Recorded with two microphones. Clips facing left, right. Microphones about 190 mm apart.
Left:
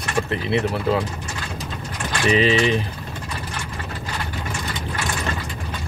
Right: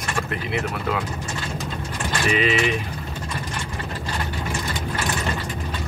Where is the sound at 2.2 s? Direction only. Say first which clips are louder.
Left 4 dB; 30° left (ahead or behind).